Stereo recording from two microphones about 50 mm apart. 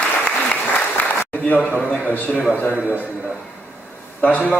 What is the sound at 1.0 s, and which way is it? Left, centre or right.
Applause, left.